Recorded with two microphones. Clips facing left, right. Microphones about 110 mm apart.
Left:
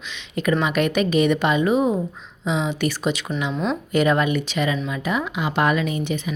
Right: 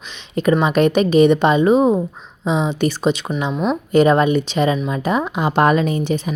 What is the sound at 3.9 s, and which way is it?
Speech, 30° right (ahead or behind).